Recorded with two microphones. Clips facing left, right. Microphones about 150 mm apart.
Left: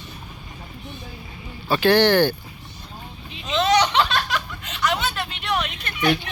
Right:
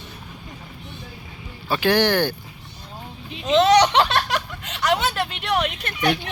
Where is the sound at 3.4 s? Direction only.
70° right (ahead or behind).